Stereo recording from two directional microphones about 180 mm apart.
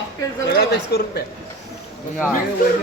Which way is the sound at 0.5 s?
65° left (ahead or behind).